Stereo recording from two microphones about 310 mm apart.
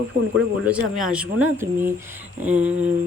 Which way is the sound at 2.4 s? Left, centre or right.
Centre.